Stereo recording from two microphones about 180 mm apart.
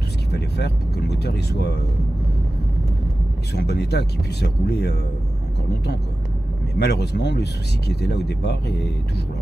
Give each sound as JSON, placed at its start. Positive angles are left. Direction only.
{"t": 0.3, "sound": "speech", "side_deg": 65}
{"t": 3.5, "sound": "speech", "side_deg": 65}
{"t": 6.8, "sound": "speech", "side_deg": 65}